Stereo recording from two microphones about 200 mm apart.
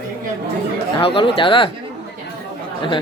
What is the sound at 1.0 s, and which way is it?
Speech, 25° left (ahead or behind).